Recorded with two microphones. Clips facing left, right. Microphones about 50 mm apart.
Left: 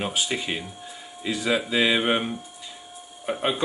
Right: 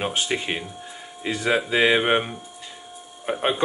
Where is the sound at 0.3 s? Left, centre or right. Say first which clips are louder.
Right 2 dB; centre.